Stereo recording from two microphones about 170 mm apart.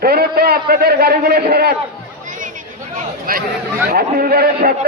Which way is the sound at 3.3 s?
60° right (ahead or behind).